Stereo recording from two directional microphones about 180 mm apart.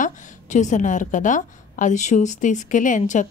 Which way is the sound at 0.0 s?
45° left (ahead or behind).